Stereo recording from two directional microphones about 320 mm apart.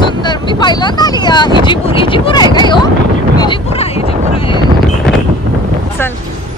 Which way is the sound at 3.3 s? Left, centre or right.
Centre.